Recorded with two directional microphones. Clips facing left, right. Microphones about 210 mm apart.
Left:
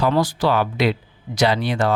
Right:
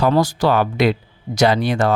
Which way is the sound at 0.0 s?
45° right (ahead or behind).